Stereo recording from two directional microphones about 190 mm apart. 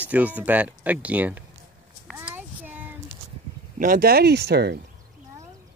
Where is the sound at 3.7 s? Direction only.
45° right (ahead or behind).